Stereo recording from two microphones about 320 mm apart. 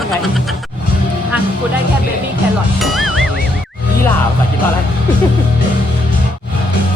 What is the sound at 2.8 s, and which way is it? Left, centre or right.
Speech, centre.